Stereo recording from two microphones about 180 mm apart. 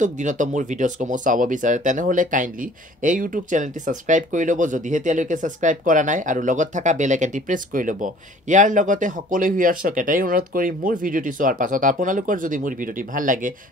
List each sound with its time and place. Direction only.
0.0 s speech: 45° right (ahead or behind)